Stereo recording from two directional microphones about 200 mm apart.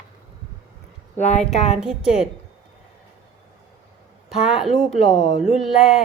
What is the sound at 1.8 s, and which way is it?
Speech, 5° right (ahead or behind).